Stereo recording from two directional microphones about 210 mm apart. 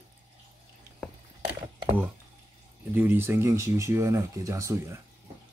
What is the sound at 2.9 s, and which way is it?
Speech, 10° right (ahead or behind).